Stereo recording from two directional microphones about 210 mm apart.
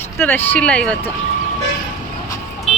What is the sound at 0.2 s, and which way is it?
Speech, 10° left (ahead or behind).